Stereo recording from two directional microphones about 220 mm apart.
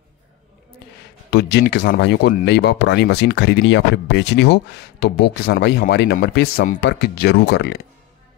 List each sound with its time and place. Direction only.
1.3 s speech: 50° left (ahead or behind)